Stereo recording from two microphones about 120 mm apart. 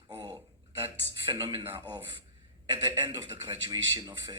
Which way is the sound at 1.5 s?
50° right (ahead or behind).